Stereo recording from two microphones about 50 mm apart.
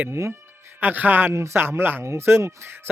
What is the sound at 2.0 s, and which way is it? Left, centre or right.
Speech, right.